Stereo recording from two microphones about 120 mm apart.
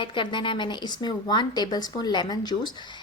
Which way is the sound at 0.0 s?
45° left (ahead or behind).